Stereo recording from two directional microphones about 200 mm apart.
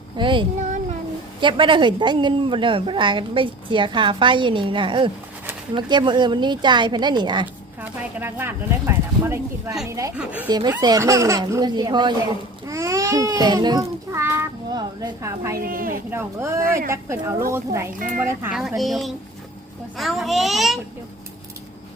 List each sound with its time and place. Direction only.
0.2 s a woman's voice: 25° right (ahead or behind)
7.8 s speech: 10° right (ahead or behind)
10.5 s a woman's voice: 20° right (ahead or behind)
15.5 s speech: 45° right (ahead or behind)
16.0 s speech: 15° right (ahead or behind)